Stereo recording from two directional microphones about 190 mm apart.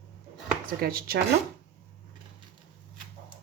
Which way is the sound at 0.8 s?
55° right (ahead or behind).